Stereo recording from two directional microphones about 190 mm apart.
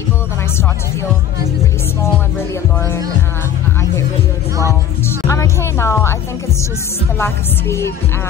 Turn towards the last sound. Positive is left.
turn(degrees=15)  # may be behind; listen again after turning